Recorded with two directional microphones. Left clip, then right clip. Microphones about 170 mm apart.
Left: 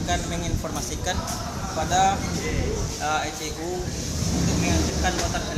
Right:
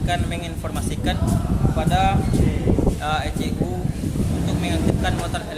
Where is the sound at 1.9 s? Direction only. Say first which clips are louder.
Even; 5° right (ahead or behind).